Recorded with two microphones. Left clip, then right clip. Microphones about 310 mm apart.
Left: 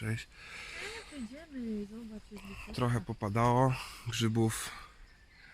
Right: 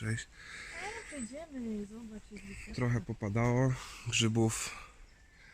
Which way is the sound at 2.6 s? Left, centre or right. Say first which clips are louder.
Left 2 dB; centre.